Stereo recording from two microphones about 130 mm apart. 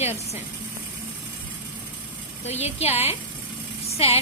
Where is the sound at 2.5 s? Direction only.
55° left (ahead or behind).